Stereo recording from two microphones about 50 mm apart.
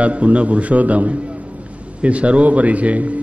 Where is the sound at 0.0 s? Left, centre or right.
Right.